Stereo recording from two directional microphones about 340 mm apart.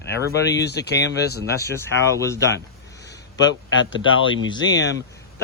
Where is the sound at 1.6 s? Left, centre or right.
Centre.